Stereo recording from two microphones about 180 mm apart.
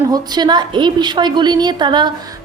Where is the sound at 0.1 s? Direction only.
25° right (ahead or behind).